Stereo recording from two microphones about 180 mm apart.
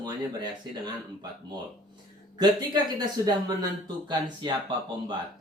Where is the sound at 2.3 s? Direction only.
25° right (ahead or behind).